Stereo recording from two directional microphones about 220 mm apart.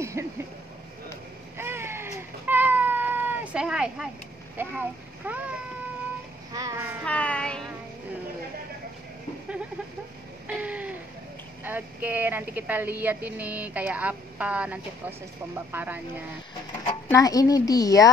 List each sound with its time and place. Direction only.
0.0 s a sound: 10° right (ahead or behind)
1.6 s cat: 10° right (ahead or behind)
4.6 s speech: 10° right (ahead or behind)
7.1 s child singing: 5° left (ahead or behind)
10.4 s a sound: 5° right (ahead or behind)
11.6 s speech: 10° right (ahead or behind)
16.8 s speech: 15° left (ahead or behind)